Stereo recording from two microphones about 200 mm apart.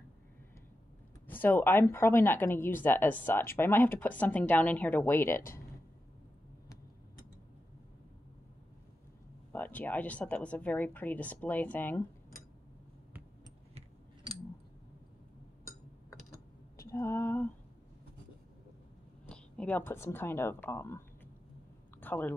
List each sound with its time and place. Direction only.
1.2 s speech: 10° left (ahead or behind)
9.5 s speech: 10° left (ahead or behind)
13.7 s a sound: 30° right (ahead or behind)
16.8 s female singing: 15° left (ahead or behind)
19.2 s speech: 5° left (ahead or behind)
22.0 s a sound: 10° left (ahead or behind)